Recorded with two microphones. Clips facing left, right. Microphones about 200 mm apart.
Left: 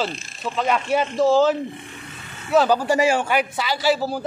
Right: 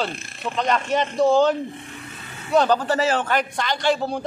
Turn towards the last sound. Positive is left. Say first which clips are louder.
# left 1 dB
turn(degrees=5)  # may be behind; listen again after turning